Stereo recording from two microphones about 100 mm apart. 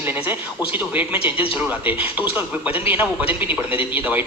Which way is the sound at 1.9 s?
15° right (ahead or behind).